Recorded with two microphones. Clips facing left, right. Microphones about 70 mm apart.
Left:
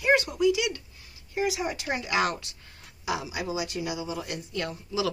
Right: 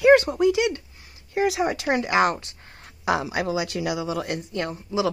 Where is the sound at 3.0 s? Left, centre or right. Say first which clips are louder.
Right 7 dB; right.